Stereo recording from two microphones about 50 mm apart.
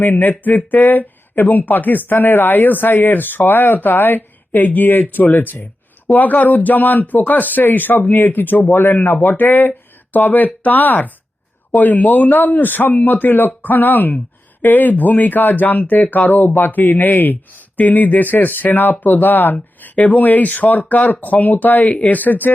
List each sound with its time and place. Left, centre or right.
0.0 s speech: left